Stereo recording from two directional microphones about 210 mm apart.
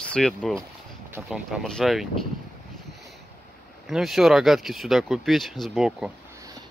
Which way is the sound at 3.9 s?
Centre (ahead or behind).